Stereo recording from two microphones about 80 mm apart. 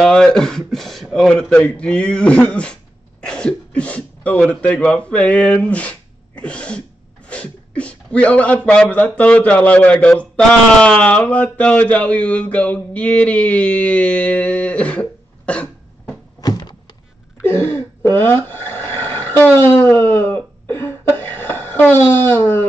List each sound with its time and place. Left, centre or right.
0.0 s speech: centre
16.3 s door: left
17.4 s a sound: left